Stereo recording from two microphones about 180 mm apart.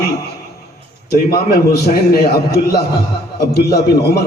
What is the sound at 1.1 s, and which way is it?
A man's voice, 60° left (ahead or behind).